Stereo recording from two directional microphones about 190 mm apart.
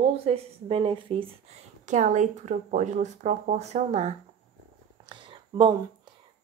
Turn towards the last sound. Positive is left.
turn(degrees=-25)  # may be behind; listen again after turning